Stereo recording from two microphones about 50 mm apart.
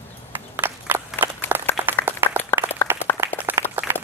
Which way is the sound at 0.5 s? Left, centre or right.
Right.